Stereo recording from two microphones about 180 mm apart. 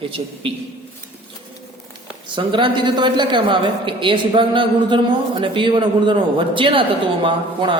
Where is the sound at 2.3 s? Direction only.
25° right (ahead or behind).